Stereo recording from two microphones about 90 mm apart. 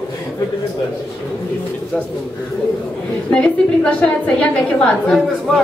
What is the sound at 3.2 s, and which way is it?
A woman's voice, 10° left (ahead or behind).